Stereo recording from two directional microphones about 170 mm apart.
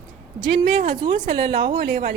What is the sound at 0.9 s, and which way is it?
Speech, 30° right (ahead or behind).